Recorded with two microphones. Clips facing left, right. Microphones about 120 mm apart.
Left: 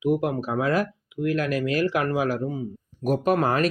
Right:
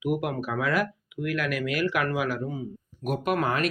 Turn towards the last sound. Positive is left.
turn(degrees=35)  # may be behind; listen again after turning